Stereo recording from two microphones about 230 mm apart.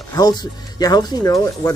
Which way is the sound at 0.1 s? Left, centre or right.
Centre.